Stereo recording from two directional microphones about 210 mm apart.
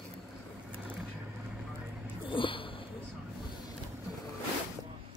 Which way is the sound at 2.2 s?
25° left (ahead or behind).